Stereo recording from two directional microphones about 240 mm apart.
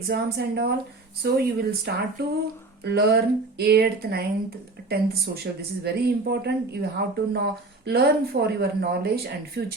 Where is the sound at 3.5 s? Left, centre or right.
Right.